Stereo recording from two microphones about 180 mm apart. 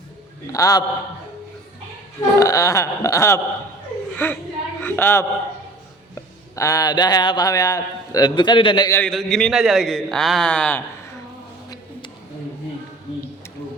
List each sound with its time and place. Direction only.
0.5 s speech: 20° left (ahead or behind)
2.4 s a sound: 20° left (ahead or behind)
4.8 s a man's voice: 10° left (ahead or behind); by 8.9 s 25° left (ahead or behind)
8.9 s a man's voice: 5° left (ahead or behind)